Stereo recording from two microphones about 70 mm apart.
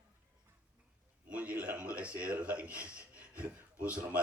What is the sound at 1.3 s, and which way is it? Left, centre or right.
A man's voice, right.